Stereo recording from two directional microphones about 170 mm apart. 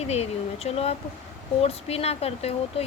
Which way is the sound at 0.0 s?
40° left (ahead or behind).